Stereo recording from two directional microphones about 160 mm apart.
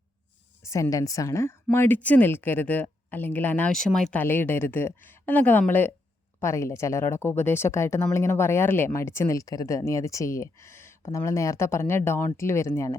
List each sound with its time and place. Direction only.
0.6 s speech: 20° left (ahead or behind)